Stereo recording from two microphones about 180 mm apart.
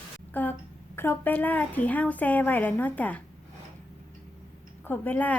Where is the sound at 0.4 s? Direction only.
10° left (ahead or behind).